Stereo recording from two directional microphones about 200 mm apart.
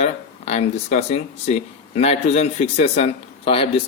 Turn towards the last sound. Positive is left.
turn(degrees=30)  # may be behind; listen again after turning